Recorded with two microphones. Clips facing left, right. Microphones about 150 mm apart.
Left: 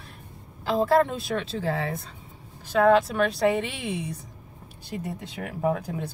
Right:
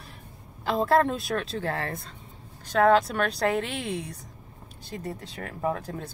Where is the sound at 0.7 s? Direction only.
Centre (ahead or behind).